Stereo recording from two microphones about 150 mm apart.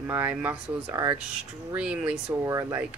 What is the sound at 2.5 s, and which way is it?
Speech, 20° right (ahead or behind).